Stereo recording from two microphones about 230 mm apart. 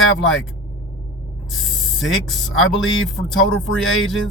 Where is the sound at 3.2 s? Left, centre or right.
Left.